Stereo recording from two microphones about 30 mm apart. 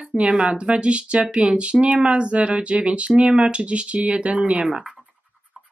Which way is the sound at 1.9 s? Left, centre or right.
Right.